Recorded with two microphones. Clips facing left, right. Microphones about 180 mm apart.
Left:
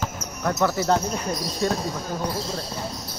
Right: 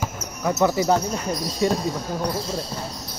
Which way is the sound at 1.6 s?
15° right (ahead or behind).